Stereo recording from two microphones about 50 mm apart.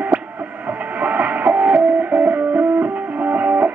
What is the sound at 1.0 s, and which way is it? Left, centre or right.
Music, right.